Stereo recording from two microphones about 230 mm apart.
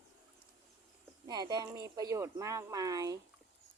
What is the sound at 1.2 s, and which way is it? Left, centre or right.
Speech, centre.